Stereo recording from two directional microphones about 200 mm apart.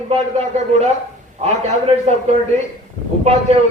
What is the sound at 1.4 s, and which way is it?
A man's voice, 30° right (ahead or behind).